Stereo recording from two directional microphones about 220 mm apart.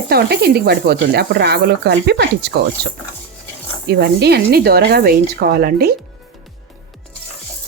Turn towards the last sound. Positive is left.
turn(degrees=-45)  # may be behind; listen again after turning